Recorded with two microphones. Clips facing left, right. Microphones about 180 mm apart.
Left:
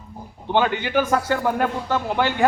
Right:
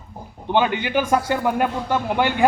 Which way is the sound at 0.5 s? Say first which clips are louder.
Even; 15° right (ahead or behind).